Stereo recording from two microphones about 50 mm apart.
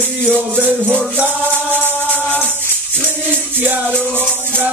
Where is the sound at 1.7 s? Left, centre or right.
Left.